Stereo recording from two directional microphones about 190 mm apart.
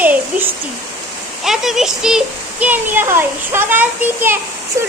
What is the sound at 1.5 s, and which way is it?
A child's voice, centre (ahead or behind).